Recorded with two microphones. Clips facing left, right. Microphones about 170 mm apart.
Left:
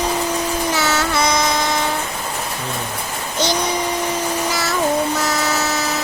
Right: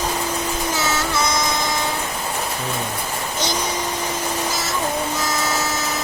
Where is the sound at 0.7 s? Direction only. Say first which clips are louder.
Left 2 dB; 65° left (ahead or behind).